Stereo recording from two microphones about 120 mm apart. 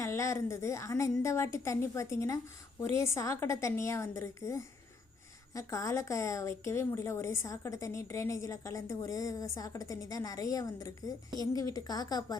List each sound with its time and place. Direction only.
0.0 s a woman's voice: 25° left (ahead or behind)